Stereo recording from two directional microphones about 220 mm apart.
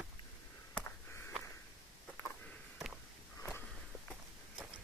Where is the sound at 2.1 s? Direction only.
5° left (ahead or behind).